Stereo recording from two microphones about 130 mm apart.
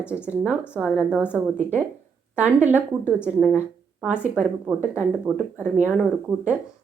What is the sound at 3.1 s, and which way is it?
A woman's voice, 5° right (ahead or behind).